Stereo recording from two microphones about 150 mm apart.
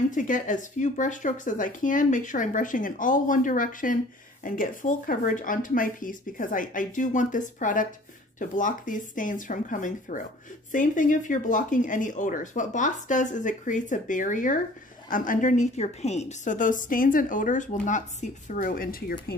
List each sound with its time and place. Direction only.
0.1 s speech: 60° left (ahead or behind); by 19.1 s 75° left (ahead or behind)